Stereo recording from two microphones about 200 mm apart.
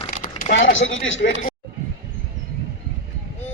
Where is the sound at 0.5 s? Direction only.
75° left (ahead or behind).